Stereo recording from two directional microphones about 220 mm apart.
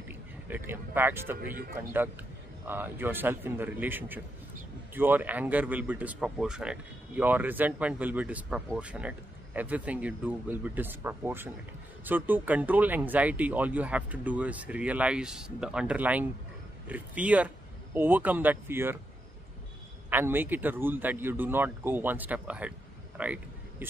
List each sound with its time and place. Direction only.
0.1 s speech: 10° right (ahead or behind)
1.4 s speech: 40° right (ahead or behind)
1.8 s speech: 10° right (ahead or behind)
20.1 s speech: 10° right (ahead or behind)
23.1 s a sound: 5° right (ahead or behind)